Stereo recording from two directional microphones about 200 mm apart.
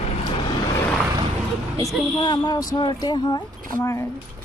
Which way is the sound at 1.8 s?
20° left (ahead or behind).